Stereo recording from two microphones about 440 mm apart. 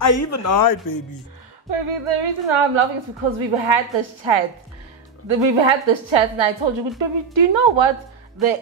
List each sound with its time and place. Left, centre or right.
0.0 s speech: left
1.7 s a woman's voice: right
5.3 s a woman's voice: right